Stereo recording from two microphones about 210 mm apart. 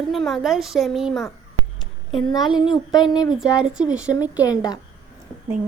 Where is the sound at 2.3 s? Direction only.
20° left (ahead or behind).